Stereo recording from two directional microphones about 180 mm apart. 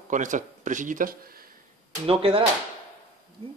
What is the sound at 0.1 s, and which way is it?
Speech, 45° right (ahead or behind).